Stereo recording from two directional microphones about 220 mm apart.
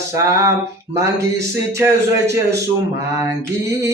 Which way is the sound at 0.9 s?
15° right (ahead or behind).